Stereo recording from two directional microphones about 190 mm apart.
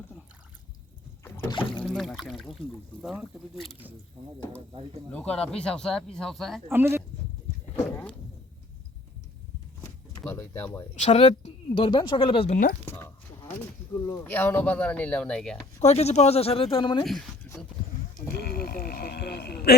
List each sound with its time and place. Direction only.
1.5 s rowboat: 25° left (ahead or behind)
1.8 s speech: centre (ahead or behind)
5.1 s speech: 5° left (ahead or behind)
6.7 s speech: 10° right (ahead or behind)
9.8 s door: 15° left (ahead or behind)
10.9 s speech: 35° left (ahead or behind)
12.8 s a sound: 10° left (ahead or behind)
14.0 s speech: 15° left (ahead or behind)
15.8 s speech: 35° left (ahead or behind)
18.3 s a sound: 55° left (ahead or behind)